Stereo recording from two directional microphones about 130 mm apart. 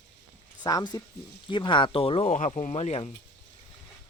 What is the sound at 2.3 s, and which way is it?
Speech, 65° left (ahead or behind).